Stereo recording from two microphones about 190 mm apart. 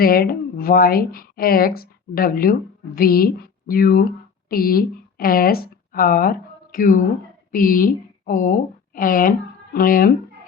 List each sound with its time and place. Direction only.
0.0 s a woman's voice: 50° left (ahead or behind)